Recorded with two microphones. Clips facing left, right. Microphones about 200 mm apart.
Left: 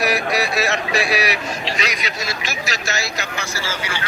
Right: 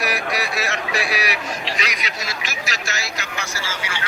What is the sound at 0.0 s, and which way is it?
A man's voice, 25° left (ahead or behind).